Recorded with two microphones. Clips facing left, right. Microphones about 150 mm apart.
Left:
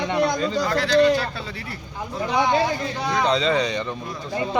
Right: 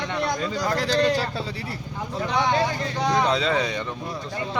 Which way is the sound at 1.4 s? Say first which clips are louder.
Right 3 dB; 35° right (ahead or behind).